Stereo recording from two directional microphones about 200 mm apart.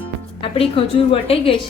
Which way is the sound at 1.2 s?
30° left (ahead or behind).